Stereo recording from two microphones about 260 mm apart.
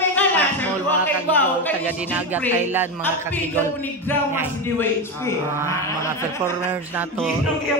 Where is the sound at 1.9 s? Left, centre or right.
Centre.